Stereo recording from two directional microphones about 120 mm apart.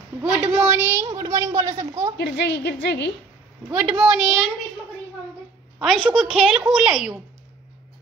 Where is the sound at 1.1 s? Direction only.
30° right (ahead or behind).